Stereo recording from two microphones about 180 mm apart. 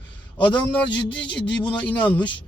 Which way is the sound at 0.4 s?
10° left (ahead or behind).